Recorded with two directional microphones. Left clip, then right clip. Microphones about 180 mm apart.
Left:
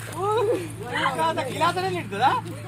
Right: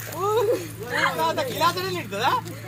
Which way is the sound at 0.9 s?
35° left (ahead or behind).